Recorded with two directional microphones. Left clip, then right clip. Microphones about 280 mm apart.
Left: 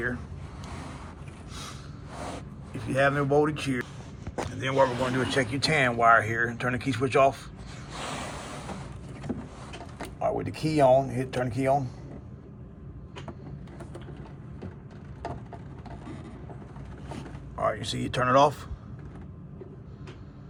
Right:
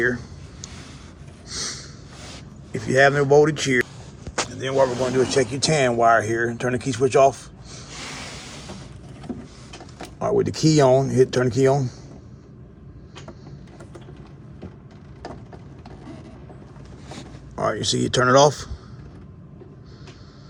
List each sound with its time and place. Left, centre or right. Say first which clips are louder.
1.5 s a sound: right 12 dB; right
2.9 s speech: right 8 dB; right
4.5 s speech: right 4 dB; centre
10.2 s speech: right 8 dB; right
17.5 s speech: right 6 dB; right